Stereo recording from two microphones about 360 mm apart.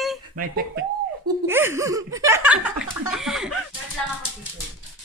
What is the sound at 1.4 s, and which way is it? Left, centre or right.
Speech, centre.